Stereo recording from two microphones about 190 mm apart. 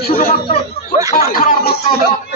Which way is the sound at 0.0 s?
50° left (ahead or behind).